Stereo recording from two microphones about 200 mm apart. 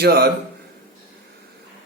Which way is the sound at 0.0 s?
50° right (ahead or behind).